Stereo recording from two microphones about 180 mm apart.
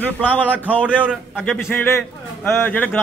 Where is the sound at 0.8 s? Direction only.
5° right (ahead or behind).